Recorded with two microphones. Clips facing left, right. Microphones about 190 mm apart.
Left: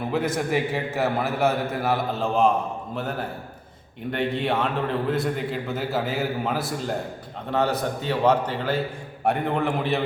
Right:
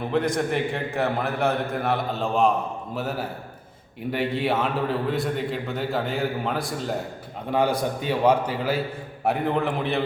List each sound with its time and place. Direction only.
0.1 s a man's voice: 5° left (ahead or behind)
7.5 s a man's voice: 10° right (ahead or behind)